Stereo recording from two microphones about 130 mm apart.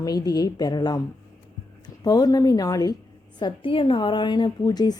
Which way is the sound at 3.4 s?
40° left (ahead or behind).